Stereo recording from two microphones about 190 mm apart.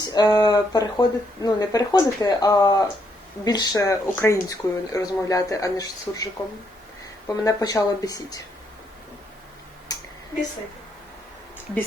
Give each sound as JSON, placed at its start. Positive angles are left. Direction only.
{"t": 0.0, "sound": "speech", "side_deg": 20}
{"t": 7.4, "sound": "speech", "side_deg": 20}
{"t": 9.9, "sound": "a sound", "side_deg": 20}